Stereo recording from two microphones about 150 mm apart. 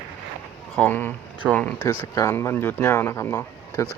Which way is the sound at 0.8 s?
10° left (ahead or behind).